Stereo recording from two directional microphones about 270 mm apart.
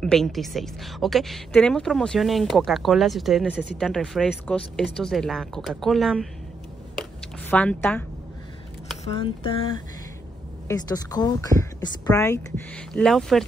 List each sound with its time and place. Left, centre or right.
0.0 s speech: centre
7.0 s a sound: centre
9.0 s a woman's voice: centre